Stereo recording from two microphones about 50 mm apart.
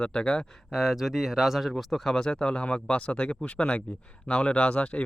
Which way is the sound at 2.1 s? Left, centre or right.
Centre.